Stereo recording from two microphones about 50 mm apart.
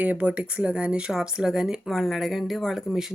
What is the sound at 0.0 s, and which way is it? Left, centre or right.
Speech, right.